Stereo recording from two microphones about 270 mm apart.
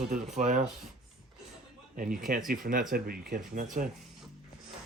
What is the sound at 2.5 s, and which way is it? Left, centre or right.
Speech, right.